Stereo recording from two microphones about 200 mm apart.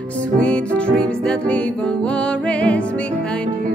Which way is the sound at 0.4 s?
5° left (ahead or behind).